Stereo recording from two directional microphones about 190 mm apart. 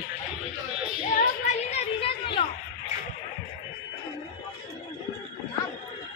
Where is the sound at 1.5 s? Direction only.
30° left (ahead or behind).